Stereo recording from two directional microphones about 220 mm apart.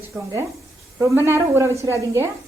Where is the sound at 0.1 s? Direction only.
15° right (ahead or behind).